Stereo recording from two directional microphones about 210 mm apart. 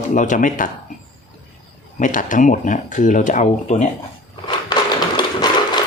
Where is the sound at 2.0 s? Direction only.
40° left (ahead or behind).